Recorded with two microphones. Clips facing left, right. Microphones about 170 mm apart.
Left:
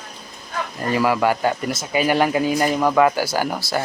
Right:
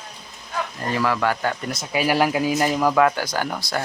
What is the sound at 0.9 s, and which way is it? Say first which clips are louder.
Speech: left 4 dB; 10° left (ahead or behind).